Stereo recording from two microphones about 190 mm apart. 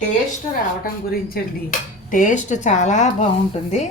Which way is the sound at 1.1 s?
50° left (ahead or behind).